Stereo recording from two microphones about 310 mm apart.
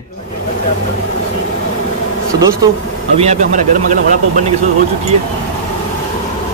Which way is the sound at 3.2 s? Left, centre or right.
Right.